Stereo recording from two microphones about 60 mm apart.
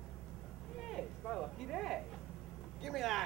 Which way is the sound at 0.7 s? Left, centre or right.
Centre.